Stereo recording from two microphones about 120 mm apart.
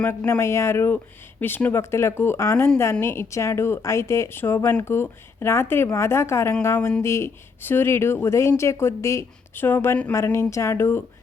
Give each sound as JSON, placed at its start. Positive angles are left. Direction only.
{"t": 0.3, "sound": "speech", "side_deg": 20}